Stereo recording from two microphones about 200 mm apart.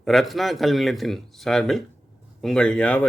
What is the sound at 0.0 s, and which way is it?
Speech, centre (ahead or behind).